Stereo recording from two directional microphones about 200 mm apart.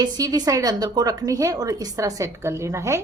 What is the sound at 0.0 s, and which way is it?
A woman's voice, 20° right (ahead or behind).